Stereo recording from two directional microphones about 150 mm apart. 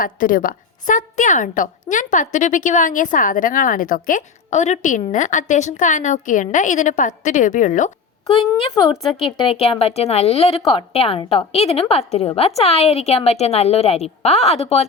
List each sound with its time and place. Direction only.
0.0 s a woman's voice: 65° left (ahead or behind)
9.2 s a woman's voice: 40° left (ahead or behind)